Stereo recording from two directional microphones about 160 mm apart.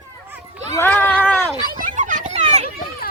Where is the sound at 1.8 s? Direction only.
50° right (ahead or behind).